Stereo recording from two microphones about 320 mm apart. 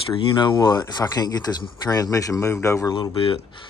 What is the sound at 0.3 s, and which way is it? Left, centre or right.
Speech, centre.